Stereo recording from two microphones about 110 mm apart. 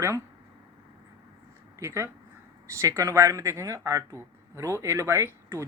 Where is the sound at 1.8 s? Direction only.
25° right (ahead or behind).